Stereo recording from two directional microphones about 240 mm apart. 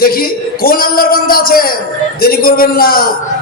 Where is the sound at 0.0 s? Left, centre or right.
Left.